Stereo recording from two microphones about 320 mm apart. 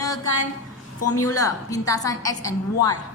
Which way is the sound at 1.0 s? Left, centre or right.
Left.